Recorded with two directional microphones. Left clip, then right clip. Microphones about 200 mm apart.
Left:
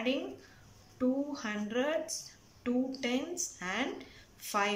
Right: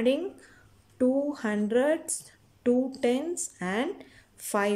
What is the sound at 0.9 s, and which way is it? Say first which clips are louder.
A woman's voice: right 7 dB; 35° right (ahead or behind).